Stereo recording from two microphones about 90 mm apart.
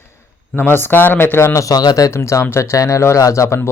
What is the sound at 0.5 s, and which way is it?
Speech, 25° left (ahead or behind).